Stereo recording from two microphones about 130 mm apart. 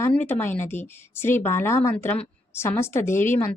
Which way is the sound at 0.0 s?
15° left (ahead or behind).